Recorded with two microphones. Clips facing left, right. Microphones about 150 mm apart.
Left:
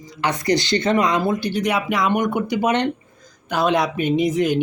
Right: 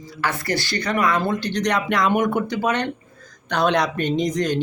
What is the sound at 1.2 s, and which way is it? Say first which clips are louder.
Speech: left 2 dB; 10° left (ahead or behind).